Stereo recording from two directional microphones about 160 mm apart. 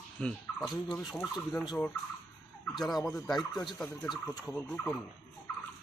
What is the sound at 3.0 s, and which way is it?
Speech, 20° left (ahead or behind).